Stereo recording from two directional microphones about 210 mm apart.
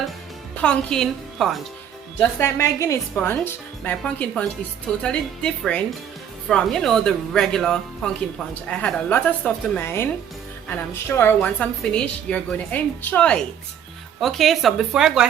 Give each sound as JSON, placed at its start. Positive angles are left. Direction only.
{"t": 0.5, "sound": "a woman's voice", "side_deg": 5}
{"t": 2.1, "sound": "a woman's voice", "side_deg": 15}